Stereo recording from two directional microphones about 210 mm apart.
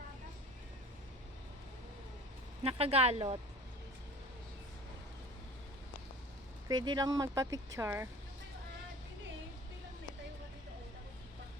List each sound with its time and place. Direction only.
2.6 s speech: 30° right (ahead or behind)
6.7 s speech: 20° right (ahead or behind)